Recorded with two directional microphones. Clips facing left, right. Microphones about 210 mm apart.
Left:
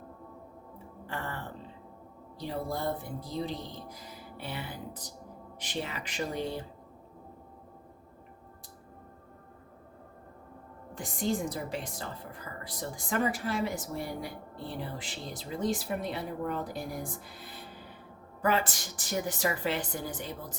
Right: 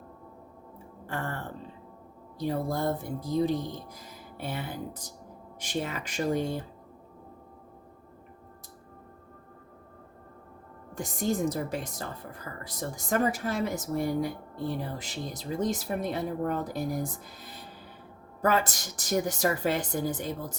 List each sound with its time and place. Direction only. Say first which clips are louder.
1.0 s music: right 4 dB; 50° right (ahead or behind)
2.4 s a woman's voice: right 5 dB; 45° right (ahead or behind)
10.9 s a woman's voice: right 2 dB; 45° right (ahead or behind)
18.4 s a woman's voice: right 3 dB; 45° right (ahead or behind)